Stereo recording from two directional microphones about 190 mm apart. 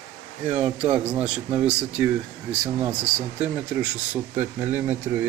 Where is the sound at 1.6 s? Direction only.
5° right (ahead or behind).